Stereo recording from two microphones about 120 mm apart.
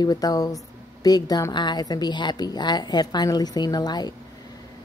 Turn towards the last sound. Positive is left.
turn(degrees=35)  # may be behind; listen again after turning